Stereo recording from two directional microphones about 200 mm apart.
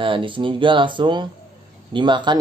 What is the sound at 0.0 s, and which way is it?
Speech, 25° right (ahead or behind).